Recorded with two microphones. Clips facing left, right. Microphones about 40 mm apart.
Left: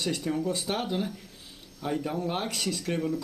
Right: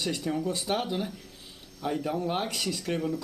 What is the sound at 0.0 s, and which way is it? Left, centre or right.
Speech, centre.